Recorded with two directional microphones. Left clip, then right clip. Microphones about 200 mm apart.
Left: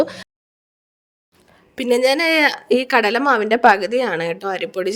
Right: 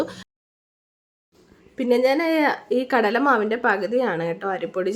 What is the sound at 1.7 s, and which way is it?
A woman's voice, 50° left (ahead or behind).